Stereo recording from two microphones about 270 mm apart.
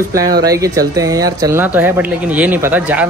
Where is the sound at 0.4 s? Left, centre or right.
Centre.